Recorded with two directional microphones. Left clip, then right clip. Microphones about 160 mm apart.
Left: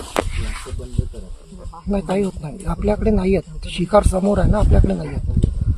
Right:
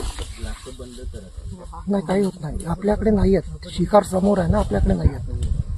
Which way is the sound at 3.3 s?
30° left (ahead or behind).